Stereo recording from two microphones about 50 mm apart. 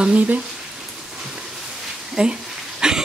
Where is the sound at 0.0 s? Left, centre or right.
Right.